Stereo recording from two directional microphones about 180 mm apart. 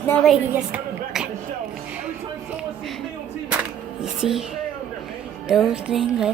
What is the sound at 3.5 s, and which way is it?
Music, 5° right (ahead or behind).